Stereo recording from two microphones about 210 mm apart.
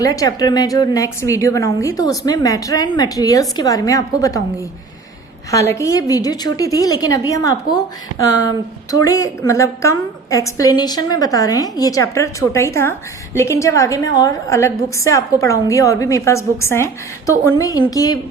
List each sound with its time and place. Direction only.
0.0 s a woman's voice: 15° left (ahead or behind)
5.5 s a woman's voice: 15° left (ahead or behind)